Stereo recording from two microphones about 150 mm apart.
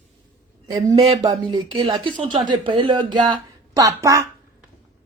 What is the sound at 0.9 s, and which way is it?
Speech, 45° right (ahead or behind).